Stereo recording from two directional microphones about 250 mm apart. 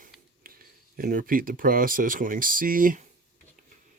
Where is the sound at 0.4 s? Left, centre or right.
Right.